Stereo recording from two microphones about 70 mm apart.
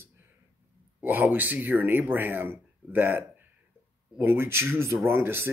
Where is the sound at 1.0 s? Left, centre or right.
Right.